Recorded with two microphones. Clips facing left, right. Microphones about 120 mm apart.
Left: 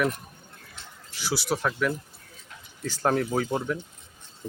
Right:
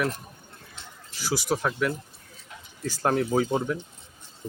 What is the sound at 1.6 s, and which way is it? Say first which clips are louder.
Speech: even; 5° right (ahead or behind).